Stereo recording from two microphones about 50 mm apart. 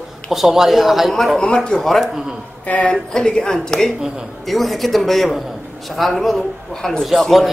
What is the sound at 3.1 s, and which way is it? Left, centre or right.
Speech, centre.